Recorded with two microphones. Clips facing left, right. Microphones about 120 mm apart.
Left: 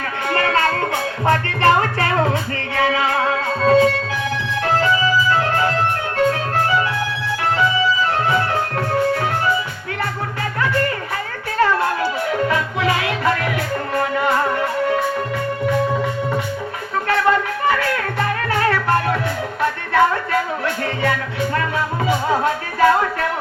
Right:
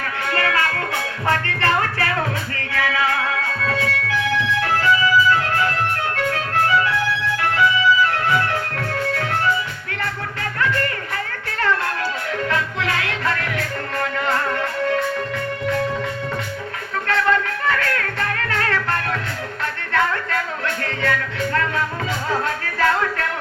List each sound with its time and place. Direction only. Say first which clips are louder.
0.3 s music: left 4 dB; 25° left (ahead or behind)
10.6 s music: left 2 dB; 20° left (ahead or behind)
17.1 s music: left 2 dB; 15° left (ahead or behind)